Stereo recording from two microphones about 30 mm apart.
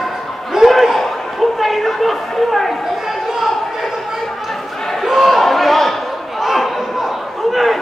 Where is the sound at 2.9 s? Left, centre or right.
Centre.